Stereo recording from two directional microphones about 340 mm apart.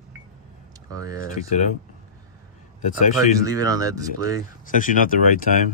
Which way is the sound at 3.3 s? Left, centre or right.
Centre.